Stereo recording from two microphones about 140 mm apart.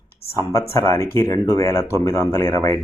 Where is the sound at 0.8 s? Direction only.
15° left (ahead or behind).